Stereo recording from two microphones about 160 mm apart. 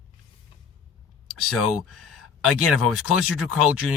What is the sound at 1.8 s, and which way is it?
Speech, centre (ahead or behind).